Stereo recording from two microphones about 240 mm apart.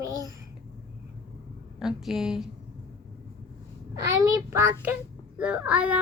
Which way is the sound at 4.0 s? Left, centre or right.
Centre.